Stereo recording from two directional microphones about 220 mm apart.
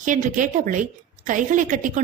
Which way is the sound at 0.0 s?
35° right (ahead or behind).